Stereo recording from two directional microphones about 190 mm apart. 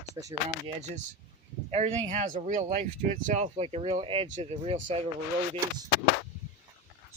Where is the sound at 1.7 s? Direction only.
35° right (ahead or behind).